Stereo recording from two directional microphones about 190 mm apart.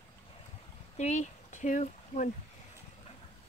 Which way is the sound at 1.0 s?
35° left (ahead or behind).